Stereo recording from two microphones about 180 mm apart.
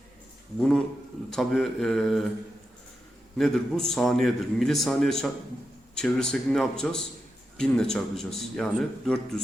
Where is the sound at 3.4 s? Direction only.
Centre (ahead or behind).